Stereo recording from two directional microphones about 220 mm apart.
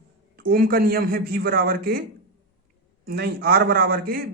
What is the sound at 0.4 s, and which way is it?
Speech, 40° right (ahead or behind).